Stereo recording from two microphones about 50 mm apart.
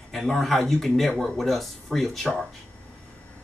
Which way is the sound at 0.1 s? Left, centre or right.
Centre.